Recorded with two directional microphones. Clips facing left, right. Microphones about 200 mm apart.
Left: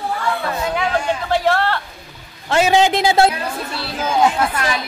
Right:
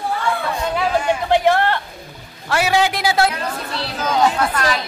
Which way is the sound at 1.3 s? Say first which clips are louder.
Right 2 dB; 15° right (ahead or behind).